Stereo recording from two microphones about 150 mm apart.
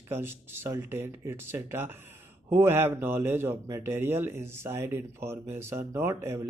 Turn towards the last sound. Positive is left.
turn(degrees=-15)  # may be behind; listen again after turning